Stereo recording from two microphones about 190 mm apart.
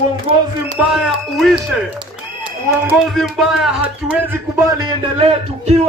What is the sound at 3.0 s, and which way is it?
Speech, centre (ahead or behind).